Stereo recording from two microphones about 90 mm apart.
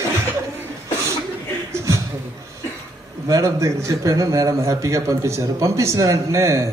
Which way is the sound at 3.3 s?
35° right (ahead or behind).